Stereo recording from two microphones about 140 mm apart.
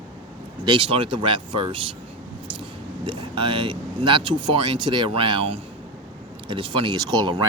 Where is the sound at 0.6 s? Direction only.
35° right (ahead or behind).